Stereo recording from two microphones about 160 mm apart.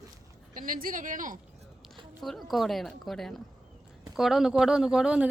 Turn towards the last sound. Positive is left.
turn(degrees=-5)  # may be behind; listen again after turning